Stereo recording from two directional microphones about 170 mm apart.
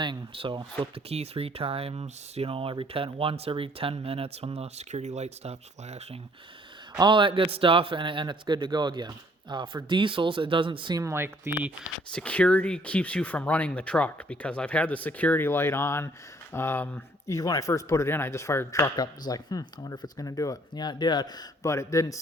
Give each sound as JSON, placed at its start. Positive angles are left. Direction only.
{"t": 0.0, "sound": "speech", "side_deg": -30}
{"t": 6.9, "sound": "a man's voice", "side_deg": -25}
{"t": 12.1, "sound": "speech", "side_deg": 10}